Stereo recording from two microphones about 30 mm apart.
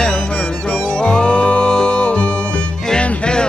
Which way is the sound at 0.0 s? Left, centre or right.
Left.